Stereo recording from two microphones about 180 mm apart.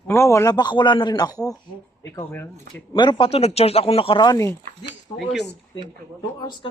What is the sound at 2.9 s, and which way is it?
Speech, 25° left (ahead or behind).